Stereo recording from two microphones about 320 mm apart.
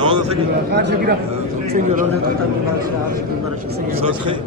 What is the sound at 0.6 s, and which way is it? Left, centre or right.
A man's voice, right.